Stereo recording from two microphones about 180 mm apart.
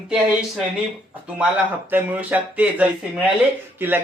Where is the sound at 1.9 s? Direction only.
10° right (ahead or behind).